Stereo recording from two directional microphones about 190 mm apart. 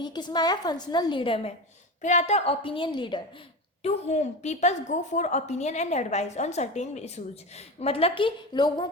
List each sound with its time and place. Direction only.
0.0 s a woman's voice: 25° left (ahead or behind)
2.0 s a woman's voice: 40° left (ahead or behind)
3.8 s a woman's voice: 35° left (ahead or behind)